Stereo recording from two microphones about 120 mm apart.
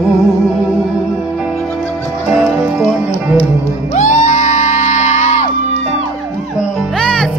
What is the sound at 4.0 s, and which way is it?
Music, 85° left.